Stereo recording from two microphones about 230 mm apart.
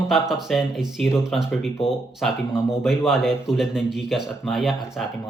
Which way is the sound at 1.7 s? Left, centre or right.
Left.